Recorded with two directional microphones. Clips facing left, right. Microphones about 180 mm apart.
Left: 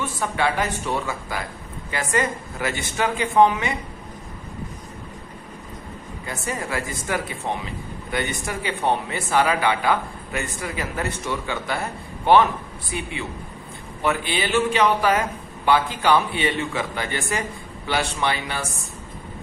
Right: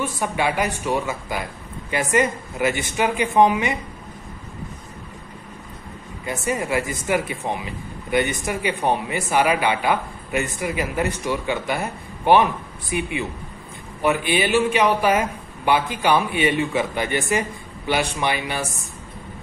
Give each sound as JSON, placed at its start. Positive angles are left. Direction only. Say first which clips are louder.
{"t": 0.0, "sound": "a man's voice", "louder": "right 1 dB", "side_deg": -15}
{"t": 6.2, "sound": "a man's voice", "louder": "right 5 dB", "side_deg": -20}